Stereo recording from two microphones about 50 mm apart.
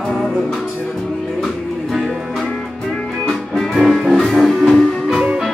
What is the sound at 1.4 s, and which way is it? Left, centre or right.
Music, centre.